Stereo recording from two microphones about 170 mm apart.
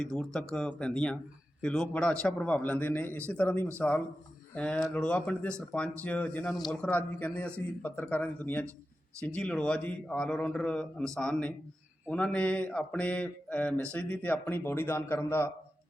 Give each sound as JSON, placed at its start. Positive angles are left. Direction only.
{"t": 0.0, "sound": "a man's voice", "side_deg": 5}